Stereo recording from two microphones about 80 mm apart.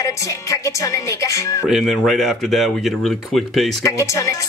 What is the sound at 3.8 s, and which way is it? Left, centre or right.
Speech, left.